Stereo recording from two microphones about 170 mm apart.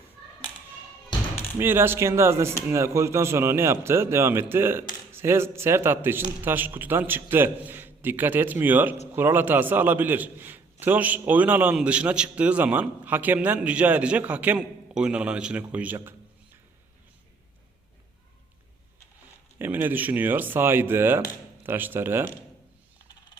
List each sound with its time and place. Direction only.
1.1 s basketball bounce: 25° left (ahead or behind)
1.5 s a man's voice: 15° right (ahead or behind)
19.5 s a man's voice: 15° right (ahead or behind)